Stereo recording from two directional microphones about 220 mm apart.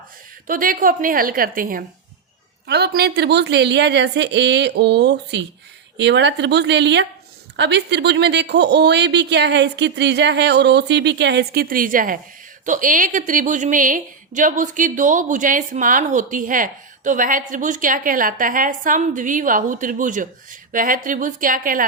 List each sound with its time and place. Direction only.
0.4 s a woman's voice: 40° right (ahead or behind)